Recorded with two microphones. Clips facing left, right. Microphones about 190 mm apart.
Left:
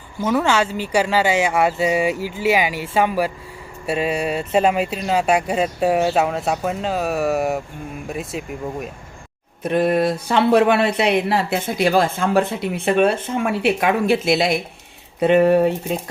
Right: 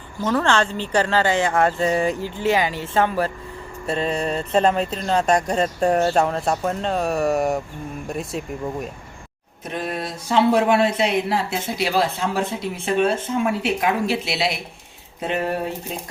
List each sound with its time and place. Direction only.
0.2 s speech: 10° left (ahead or behind)
9.6 s speech: 60° left (ahead or behind)
11.8 s speech: 50° left (ahead or behind)
14.1 s speech: 50° left (ahead or behind)
15.2 s speech: 65° left (ahead or behind)